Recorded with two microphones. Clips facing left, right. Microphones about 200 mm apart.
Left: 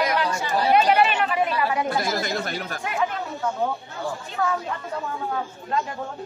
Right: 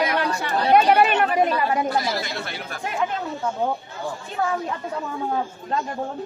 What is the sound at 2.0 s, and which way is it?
Speech, 45° left (ahead or behind).